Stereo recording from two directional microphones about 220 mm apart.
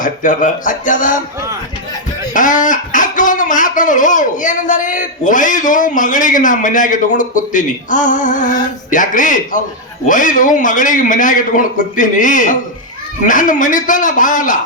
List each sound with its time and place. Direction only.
0.0 s speech: 35° left (ahead or behind)
2.3 s speech: 35° left (ahead or behind)